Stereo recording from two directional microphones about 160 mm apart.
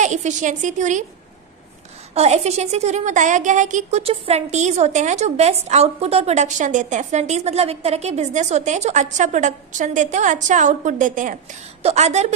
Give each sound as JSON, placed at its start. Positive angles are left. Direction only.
{"t": 0.0, "sound": "a woman's voice", "side_deg": -50}
{"t": 2.1, "sound": "a woman's voice", "side_deg": -40}